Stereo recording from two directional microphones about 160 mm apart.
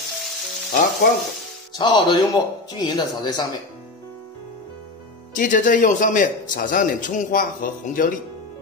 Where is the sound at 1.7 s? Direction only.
25° left (ahead or behind).